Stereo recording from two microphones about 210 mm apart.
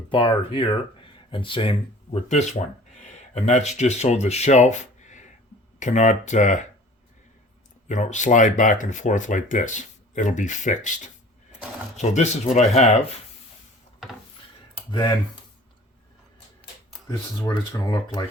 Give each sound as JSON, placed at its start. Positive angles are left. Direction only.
{"t": 0.1, "sound": "speech", "side_deg": 25}
{"t": 7.9, "sound": "speech", "side_deg": 35}
{"t": 14.8, "sound": "speech", "side_deg": 20}
{"t": 17.1, "sound": "speech", "side_deg": 15}